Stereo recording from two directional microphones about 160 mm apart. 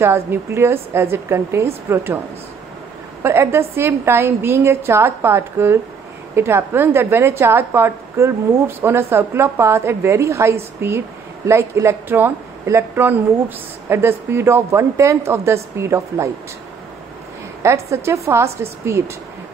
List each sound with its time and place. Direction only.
0.0 s a woman's voice: 15° right (ahead or behind)
17.6 s a woman's voice: 15° right (ahead or behind)